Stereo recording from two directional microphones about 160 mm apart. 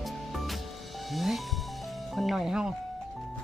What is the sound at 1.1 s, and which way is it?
Music, centre (ahead or behind).